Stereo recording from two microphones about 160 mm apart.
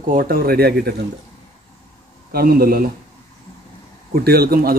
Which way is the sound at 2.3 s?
65° right (ahead or behind).